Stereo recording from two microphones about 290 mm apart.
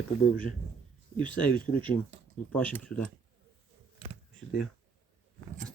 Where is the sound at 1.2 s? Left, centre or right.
Centre.